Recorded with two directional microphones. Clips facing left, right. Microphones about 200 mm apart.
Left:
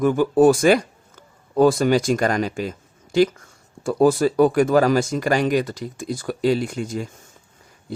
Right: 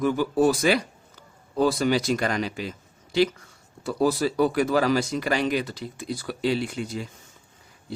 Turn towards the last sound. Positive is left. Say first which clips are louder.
# left 4 dB
turn(degrees=45)  # may be behind; listen again after turning